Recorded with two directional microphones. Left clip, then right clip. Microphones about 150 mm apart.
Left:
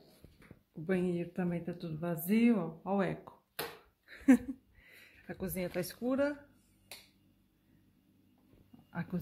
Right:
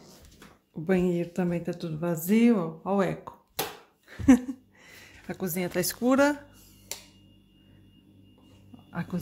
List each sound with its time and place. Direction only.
0.8 s speech: 5° right (ahead or behind)
4.1 s a sound: centre (ahead or behind)
6.0 s speech: 20° right (ahead or behind)
8.9 s speech: 10° left (ahead or behind)